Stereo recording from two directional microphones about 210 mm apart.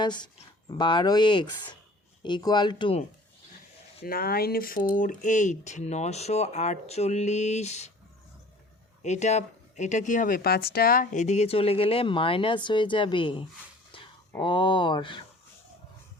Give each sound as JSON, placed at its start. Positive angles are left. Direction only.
{"t": 0.0, "sound": "speech", "side_deg": 20}
{"t": 4.0, "sound": "speech", "side_deg": 45}
{"t": 9.0, "sound": "speech", "side_deg": 35}